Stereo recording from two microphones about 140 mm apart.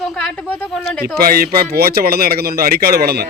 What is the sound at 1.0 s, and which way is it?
Speech, 90° right.